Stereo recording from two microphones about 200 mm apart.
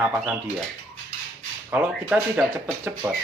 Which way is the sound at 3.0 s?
15° right (ahead or behind).